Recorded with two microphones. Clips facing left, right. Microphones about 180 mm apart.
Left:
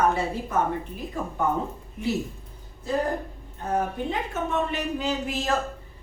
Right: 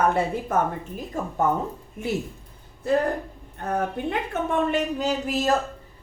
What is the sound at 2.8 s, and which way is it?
Speech, 60° right (ahead or behind).